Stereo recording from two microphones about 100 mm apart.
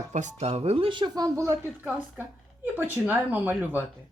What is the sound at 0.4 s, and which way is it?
Speech, 90° right.